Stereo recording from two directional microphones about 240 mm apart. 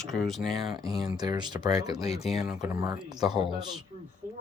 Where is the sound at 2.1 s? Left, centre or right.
Left.